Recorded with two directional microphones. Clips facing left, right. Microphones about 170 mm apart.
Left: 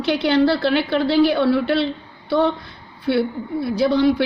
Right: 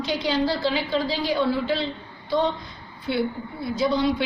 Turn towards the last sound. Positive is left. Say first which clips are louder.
# left 6 dB
turn(degrees=65)  # may be behind; listen again after turning